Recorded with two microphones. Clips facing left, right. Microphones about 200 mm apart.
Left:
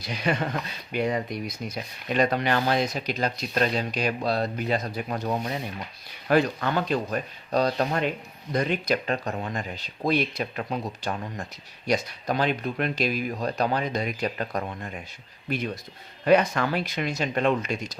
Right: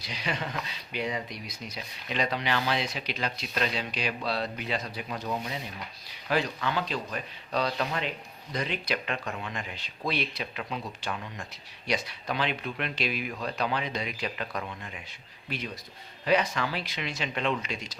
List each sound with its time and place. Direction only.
0.0 s speech: 50° left (ahead or behind)